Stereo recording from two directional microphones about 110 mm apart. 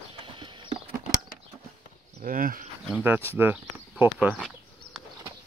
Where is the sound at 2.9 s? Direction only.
15° right (ahead or behind).